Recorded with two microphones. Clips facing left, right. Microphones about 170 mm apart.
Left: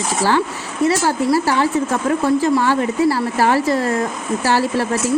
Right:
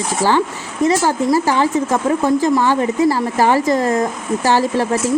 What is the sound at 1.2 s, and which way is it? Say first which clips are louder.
Speech: even; 15° right (ahead or behind).